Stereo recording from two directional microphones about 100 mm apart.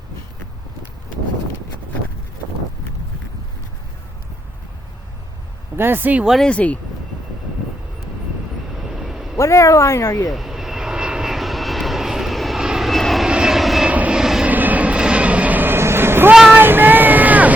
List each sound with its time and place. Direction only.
5.7 s speech: 20° right (ahead or behind)
6.2 s speech: centre (ahead or behind)
6.5 s speech: 15° left (ahead or behind)
9.0 s a sound: 5° right (ahead or behind)
9.4 s speech: 30° left (ahead or behind)
10.2 s vehicle: centre (ahead or behind)
14.5 s vehicle: 15° right (ahead or behind)
16.3 s speech: 5° right (ahead or behind)
16.6 s vehicle: 20° right (ahead or behind)